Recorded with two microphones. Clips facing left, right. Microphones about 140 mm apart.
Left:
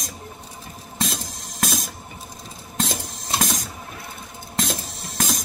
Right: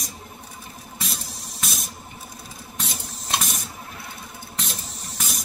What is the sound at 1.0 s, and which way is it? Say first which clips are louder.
Music: left 6 dB; 90° left.